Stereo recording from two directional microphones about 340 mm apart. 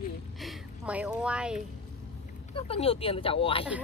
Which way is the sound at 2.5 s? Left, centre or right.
Centre.